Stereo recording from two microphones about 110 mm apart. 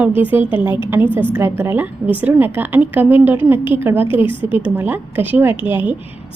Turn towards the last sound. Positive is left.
turn(degrees=-15)  # may be behind; listen again after turning